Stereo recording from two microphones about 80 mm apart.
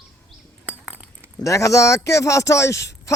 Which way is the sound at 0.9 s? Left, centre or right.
Right.